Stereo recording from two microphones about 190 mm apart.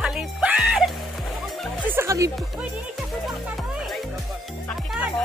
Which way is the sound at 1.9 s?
15° right (ahead or behind).